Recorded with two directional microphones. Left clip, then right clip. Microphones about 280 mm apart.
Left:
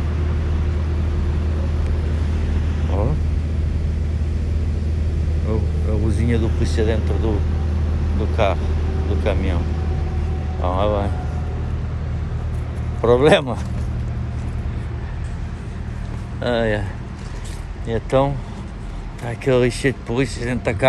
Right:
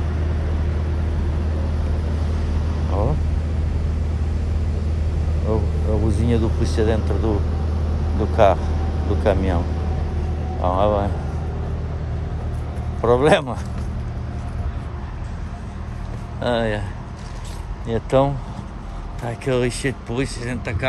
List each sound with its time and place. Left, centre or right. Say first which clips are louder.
5.2 s vehicle: right 3 dB; centre
6.4 s vehicle: right 1 dB; right
6.9 s speech: right 1 dB; centre
10.6 s speech: right 2 dB; centre
13.0 s speech: left 2 dB; centre
16.3 s speech: left 1 dB; centre
17.8 s speech: even; centre